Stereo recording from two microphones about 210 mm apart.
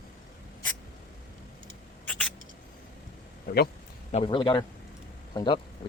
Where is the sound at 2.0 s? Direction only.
5° left (ahead or behind).